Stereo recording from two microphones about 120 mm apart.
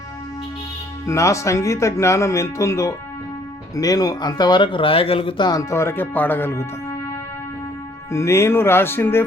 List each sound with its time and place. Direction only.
1.0 s speech: 25° left (ahead or behind); by 5.5 s 50° left (ahead or behind)
5.5 s speech: 25° left (ahead or behind)
8.1 s speech: 25° left (ahead or behind)